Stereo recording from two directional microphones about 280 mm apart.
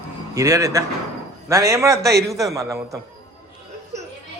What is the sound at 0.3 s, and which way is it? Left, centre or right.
A man's voice, centre.